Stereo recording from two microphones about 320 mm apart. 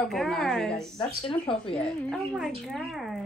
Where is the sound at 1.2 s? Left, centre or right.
Centre.